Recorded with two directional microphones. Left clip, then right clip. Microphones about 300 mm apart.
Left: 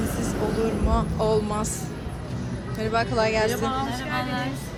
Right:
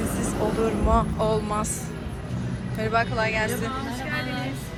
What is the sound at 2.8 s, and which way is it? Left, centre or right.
Speech, centre.